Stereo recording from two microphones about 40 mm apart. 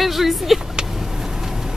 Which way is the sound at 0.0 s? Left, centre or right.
Centre.